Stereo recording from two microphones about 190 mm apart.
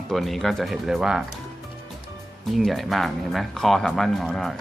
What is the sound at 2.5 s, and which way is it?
Speech, centre (ahead or behind).